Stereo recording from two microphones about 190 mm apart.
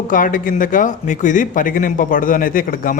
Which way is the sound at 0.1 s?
45° left (ahead or behind).